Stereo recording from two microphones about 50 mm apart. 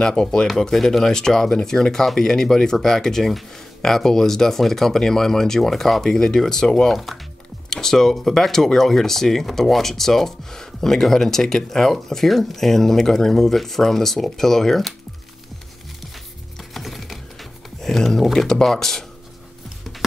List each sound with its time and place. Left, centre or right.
0.0 s speech: centre
16.7 s computer keyboard: centre
18.5 s speech: centre